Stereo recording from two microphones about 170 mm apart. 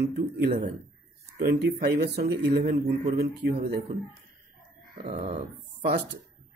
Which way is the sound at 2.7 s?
60° right (ahead or behind).